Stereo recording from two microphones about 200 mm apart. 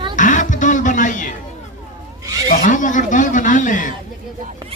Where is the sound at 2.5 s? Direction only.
40° left (ahead or behind).